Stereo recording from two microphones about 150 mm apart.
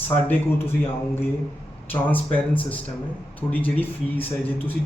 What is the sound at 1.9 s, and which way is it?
A man's voice, 10° left (ahead or behind).